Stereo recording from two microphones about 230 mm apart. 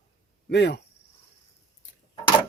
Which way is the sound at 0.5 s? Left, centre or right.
Left.